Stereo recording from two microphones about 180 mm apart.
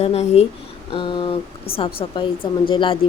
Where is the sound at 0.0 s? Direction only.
35° left (ahead or behind).